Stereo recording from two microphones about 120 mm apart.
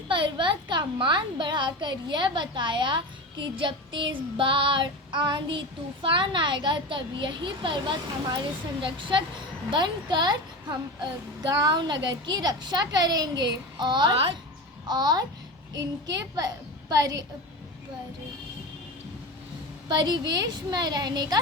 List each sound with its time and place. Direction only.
0.1 s a child's voice: 40° right (ahead or behind)
19.9 s a child's voice: 35° right (ahead or behind)